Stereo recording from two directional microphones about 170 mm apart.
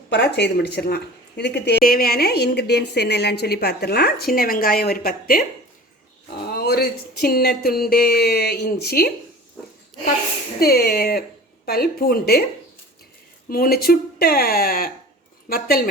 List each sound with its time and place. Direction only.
0.1 s speech: 80° left; by 5.5 s 55° left (ahead or behind)
6.5 s speech: 65° left (ahead or behind)
10.6 s speech: 65° left (ahead or behind)
13.5 s speech: 60° left (ahead or behind)